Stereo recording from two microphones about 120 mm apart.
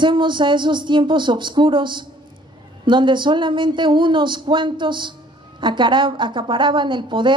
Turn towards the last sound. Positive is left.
turn(degrees=-40)  # may be behind; listen again after turning